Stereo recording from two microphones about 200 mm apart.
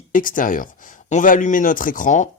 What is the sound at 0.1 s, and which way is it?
Speech, 40° left (ahead or behind).